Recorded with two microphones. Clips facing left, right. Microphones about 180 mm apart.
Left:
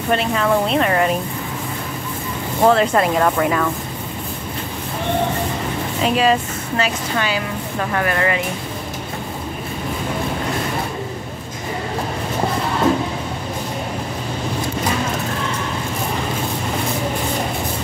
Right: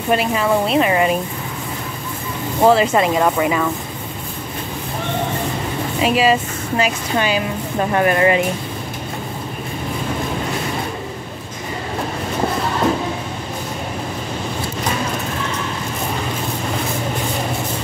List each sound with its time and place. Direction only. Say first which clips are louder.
0.1 s speech: right 1 dB; 10° right (ahead or behind)
2.6 s speech: right 1 dB; 5° right (ahead or behind)
6.0 s speech: right 1 dB; 5° right (ahead or behind)
6.8 s a woman's voice: right 2 dB; 20° right (ahead or behind)